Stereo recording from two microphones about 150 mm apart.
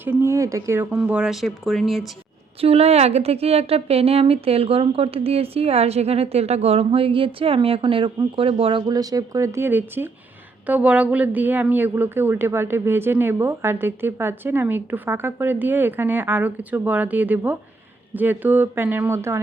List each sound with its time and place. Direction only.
0.0 s a woman's voice: 15° right (ahead or behind)
2.6 s a woman's voice: 40° right (ahead or behind); by 19.4 s 20° right (ahead or behind)